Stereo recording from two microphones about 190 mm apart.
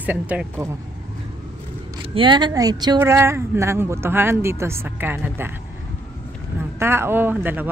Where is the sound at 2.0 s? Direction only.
25° right (ahead or behind).